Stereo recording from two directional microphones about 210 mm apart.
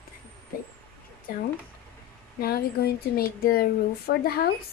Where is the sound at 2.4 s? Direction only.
50° left (ahead or behind).